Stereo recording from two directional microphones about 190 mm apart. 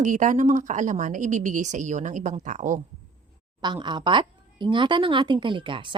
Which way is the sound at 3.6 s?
20° right (ahead or behind).